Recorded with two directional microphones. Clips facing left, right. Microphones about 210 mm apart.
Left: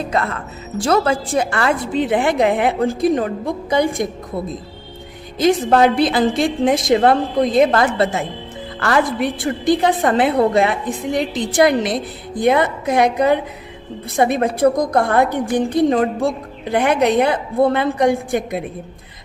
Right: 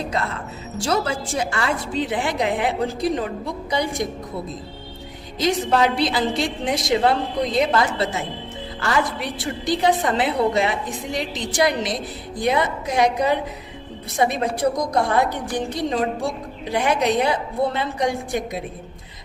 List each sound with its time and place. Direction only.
0.8 s a woman's voice: 55° left (ahead or behind)
5.4 s a woman's voice: 55° left (ahead or behind)